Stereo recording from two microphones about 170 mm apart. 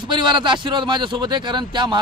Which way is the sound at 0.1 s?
25° right (ahead or behind).